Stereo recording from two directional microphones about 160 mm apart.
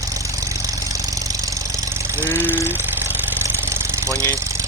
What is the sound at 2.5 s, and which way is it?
Engine, 15° right (ahead or behind).